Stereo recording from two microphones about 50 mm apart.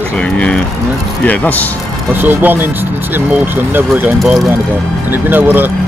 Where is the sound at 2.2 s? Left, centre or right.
Right.